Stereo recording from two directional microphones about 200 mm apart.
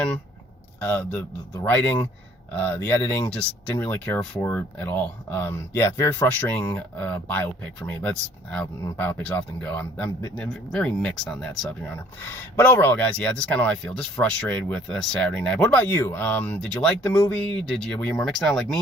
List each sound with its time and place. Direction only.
0.8 s speech: 10° left (ahead or behind)